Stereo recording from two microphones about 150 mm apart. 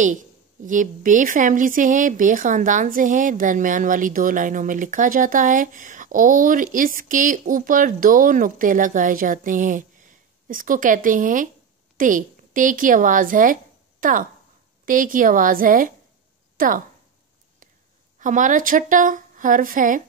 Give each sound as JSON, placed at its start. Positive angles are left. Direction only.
{"t": 0.7, "sound": "a woman's voice", "side_deg": -60}
{"t": 18.2, "sound": "a woman's voice", "side_deg": -55}